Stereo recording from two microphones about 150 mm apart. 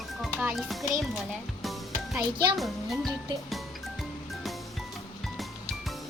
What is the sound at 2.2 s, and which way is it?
Speech, 30° right (ahead or behind).